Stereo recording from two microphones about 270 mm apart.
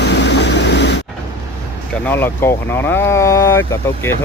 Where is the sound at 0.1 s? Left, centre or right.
Left.